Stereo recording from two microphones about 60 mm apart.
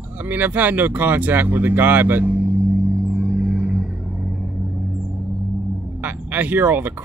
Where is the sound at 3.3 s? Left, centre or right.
Centre.